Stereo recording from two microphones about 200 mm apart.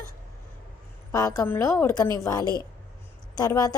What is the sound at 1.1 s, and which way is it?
A woman's voice, 15° left (ahead or behind).